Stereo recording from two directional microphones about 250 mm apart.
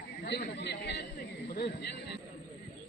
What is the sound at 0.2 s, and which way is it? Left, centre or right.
Chatter, left.